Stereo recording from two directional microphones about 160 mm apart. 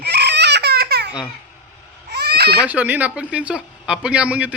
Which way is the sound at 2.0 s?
90° right.